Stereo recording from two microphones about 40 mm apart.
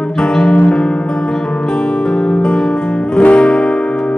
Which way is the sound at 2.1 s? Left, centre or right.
Left.